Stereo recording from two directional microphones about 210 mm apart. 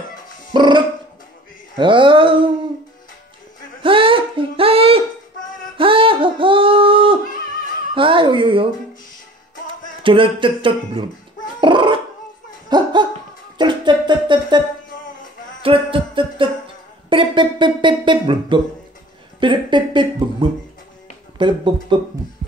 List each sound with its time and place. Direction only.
0.5 s music: 20° right (ahead or behind)
1.8 s speech: 25° right (ahead or behind)
3.8 s a sound: 25° right (ahead or behind)
10.0 s speech: 25° right (ahead or behind)
11.6 s dog: 25° right (ahead or behind)
12.6 s laughter: 20° right (ahead or behind)
13.6 s a sound: 20° right (ahead or behind)
15.6 s a sound: 25° right (ahead or behind)
19.4 s speech: 20° right (ahead or behind)